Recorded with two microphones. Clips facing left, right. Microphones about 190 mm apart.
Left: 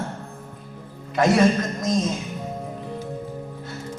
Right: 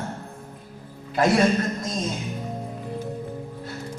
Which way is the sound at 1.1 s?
30° right (ahead or behind).